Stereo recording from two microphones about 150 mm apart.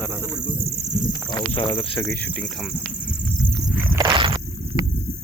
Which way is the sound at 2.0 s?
15° left (ahead or behind).